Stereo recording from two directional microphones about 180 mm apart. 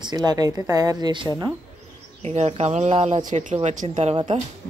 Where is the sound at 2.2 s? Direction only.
35° right (ahead or behind).